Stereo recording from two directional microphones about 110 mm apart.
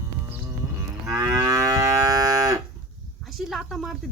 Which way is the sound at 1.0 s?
25° right (ahead or behind).